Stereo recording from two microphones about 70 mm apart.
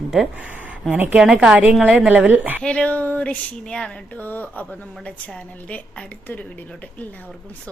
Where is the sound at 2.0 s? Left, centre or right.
Centre.